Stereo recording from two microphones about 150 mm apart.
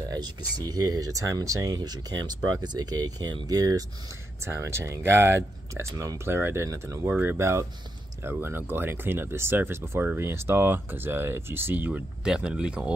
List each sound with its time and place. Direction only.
0.1 s speech: 25° right (ahead or behind); by 12.9 s 5° right (ahead or behind)